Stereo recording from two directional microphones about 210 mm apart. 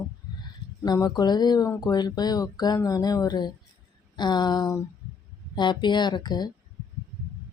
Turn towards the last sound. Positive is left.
turn(degrees=20)  # may be behind; listen again after turning